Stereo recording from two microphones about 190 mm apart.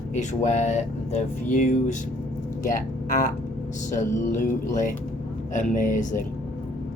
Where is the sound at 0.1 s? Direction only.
40° left (ahead or behind).